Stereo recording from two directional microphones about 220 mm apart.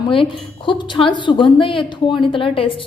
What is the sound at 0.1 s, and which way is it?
Speech, 25° left (ahead or behind).